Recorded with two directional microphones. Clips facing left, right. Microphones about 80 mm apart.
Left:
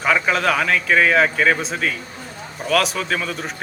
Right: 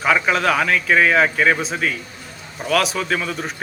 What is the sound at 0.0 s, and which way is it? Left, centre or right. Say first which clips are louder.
A man's voice: right 1 dB; centre.